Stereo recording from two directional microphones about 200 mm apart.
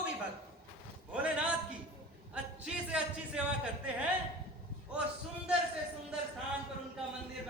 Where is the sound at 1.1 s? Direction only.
5° right (ahead or behind).